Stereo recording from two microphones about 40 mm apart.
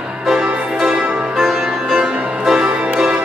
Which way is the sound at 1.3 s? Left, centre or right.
Centre.